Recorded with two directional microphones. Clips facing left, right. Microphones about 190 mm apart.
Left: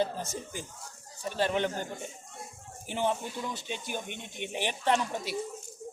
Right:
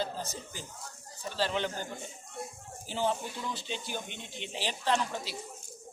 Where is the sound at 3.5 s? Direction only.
20° left (ahead or behind).